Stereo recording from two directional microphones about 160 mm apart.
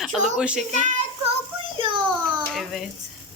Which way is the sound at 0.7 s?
50° right (ahead or behind).